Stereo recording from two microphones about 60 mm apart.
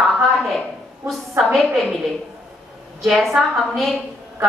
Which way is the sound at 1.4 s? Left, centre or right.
Centre.